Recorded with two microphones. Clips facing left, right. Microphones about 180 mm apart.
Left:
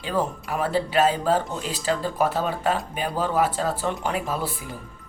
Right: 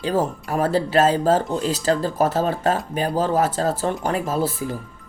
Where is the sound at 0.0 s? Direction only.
40° right (ahead or behind).